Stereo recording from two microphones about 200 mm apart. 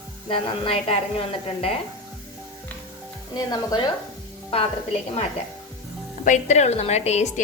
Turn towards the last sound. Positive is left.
turn(degrees=35)  # may be behind; listen again after turning